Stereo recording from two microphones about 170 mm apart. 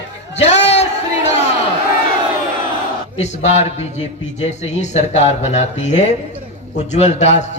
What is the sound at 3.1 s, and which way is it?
A man's voice, 40° left (ahead or behind).